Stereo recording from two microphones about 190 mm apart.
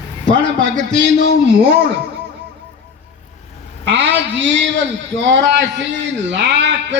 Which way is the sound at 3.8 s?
70° right (ahead or behind).